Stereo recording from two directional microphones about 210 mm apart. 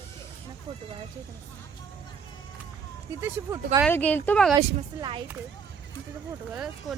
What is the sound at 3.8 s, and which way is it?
Speech, 5° left (ahead or behind).